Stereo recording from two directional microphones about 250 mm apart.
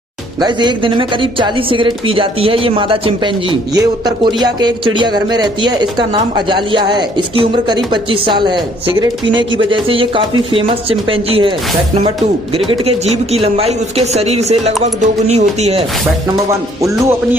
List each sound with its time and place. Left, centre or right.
0.4 s speech: centre
12.5 s speech: right
16.8 s speech: centre